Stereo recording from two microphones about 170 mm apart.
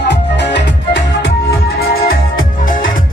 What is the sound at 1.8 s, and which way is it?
Music, 55° left (ahead or behind).